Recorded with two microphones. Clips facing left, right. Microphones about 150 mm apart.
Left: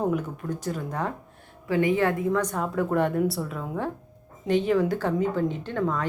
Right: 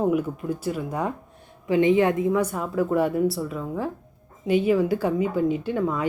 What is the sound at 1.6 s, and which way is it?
Speech, 20° right (ahead or behind).